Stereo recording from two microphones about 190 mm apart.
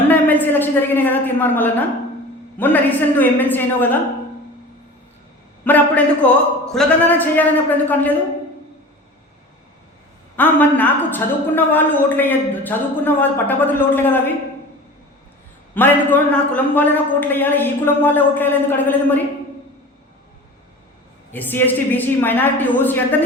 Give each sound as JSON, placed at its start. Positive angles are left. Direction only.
{"t": 0.1, "sound": "a woman's voice", "side_deg": 10}
{"t": 5.6, "sound": "a woman's voice", "side_deg": 10}
{"t": 10.3, "sound": "a woman's voice", "side_deg": 10}
{"t": 15.7, "sound": "a woman's voice", "side_deg": 10}
{"t": 21.3, "sound": "a woman's voice", "side_deg": 10}